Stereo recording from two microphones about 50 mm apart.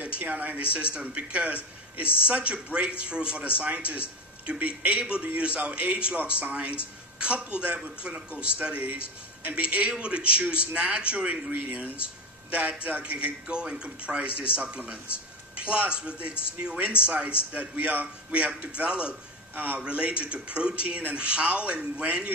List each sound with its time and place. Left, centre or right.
0.0 s a man's voice: right
7.2 s a man's voice: right
11.5 s a man's voice: right
19.5 s a man's voice: right
19.8 s a man's voice: right